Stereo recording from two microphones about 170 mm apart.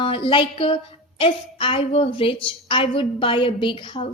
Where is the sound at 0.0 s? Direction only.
30° left (ahead or behind).